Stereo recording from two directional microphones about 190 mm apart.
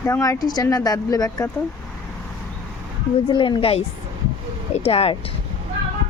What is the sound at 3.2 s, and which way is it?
Speech, 25° left (ahead or behind).